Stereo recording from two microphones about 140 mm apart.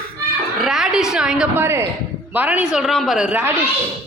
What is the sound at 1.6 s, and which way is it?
Speech, 15° right (ahead or behind).